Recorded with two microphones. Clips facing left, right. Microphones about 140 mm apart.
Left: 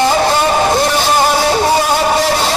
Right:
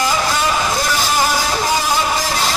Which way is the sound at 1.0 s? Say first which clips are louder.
Left 5 dB; 60° left (ahead or behind).